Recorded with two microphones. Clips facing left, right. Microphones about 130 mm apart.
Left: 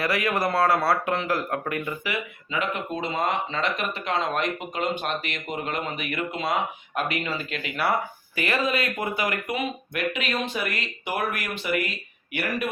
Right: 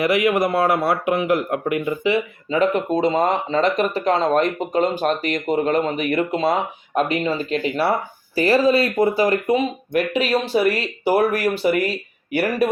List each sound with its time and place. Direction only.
0.0 s a man's voice: 20° right (ahead or behind); by 12.6 s 40° right (ahead or behind)